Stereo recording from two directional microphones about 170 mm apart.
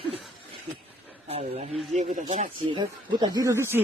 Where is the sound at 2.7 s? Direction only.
25° right (ahead or behind).